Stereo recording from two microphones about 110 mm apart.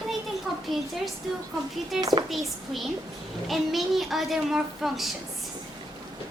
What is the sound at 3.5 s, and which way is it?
A child's voice, centre (ahead or behind).